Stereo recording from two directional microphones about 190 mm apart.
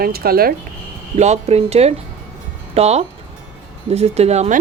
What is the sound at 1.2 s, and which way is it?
Speech, 35° right (ahead or behind).